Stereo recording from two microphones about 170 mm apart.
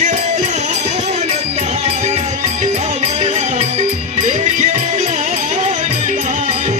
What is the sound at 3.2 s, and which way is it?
Music, 40° right (ahead or behind).